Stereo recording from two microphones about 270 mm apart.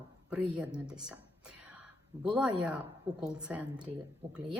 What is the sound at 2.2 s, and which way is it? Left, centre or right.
A woman's voice, centre.